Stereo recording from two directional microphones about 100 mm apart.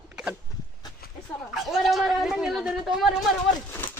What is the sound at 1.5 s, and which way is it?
Speech, centre (ahead or behind).